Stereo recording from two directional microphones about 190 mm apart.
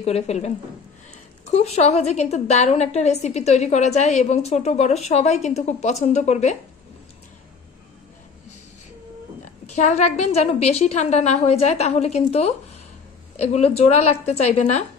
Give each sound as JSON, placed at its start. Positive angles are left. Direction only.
{"t": 0.0, "sound": "a woman's voice", "side_deg": 35}
{"t": 1.5, "sound": "a woman's voice", "side_deg": 35}
{"t": 9.7, "sound": "a woman's voice", "side_deg": 40}